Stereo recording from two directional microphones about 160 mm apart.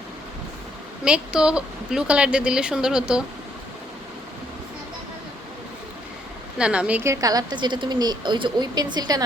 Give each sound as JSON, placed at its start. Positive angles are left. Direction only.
{"t": 1.0, "sound": "speech", "side_deg": -5}
{"t": 6.6, "sound": "a woman's voice", "side_deg": -5}